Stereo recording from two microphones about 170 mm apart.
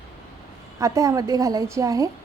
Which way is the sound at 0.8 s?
20° right (ahead or behind).